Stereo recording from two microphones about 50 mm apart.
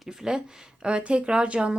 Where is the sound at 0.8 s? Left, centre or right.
Right.